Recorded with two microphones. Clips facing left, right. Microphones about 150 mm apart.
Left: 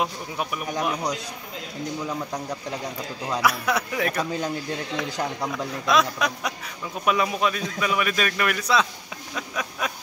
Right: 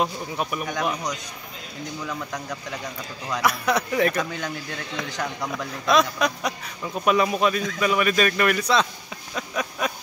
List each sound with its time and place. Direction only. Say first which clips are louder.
0.0 s a man's voice: right 2 dB; 5° left (ahead or behind)
2.0 s a man's voice: left 2 dB; 25° left (ahead or behind)
3.4 s a man's voice: right 2 dB; 5° left (ahead or behind)
4.2 s a man's voice: left 2 dB; 30° left (ahead or behind)
5.9 s a man's voice: right 2 dB; centre (ahead or behind)
9.3 s a sound: right 3 dB; centre (ahead or behind)